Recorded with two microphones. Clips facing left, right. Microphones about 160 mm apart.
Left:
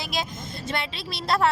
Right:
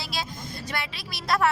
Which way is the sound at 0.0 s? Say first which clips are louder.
Left 3 dB; 20° left (ahead or behind).